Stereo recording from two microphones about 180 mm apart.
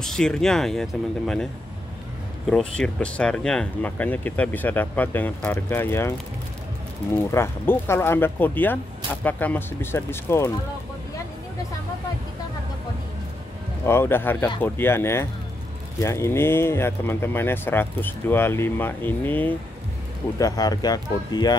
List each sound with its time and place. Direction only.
0.0 s speech: 5° left (ahead or behind)
7.2 s speech: 15° left (ahead or behind)
13.8 s speech: 15° left (ahead or behind)